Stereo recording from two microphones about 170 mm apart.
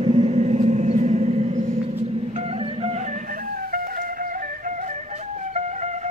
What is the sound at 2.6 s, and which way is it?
Music, 40° right (ahead or behind).